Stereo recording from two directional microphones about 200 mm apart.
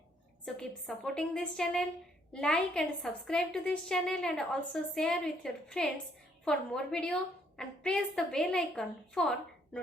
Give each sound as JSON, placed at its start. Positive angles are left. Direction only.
{"t": 0.9, "sound": "a woman's voice", "side_deg": 0}